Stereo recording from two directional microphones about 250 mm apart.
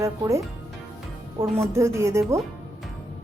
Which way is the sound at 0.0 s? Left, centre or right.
Centre.